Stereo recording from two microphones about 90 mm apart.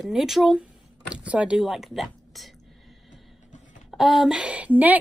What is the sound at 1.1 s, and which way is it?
Speech, 15° right (ahead or behind).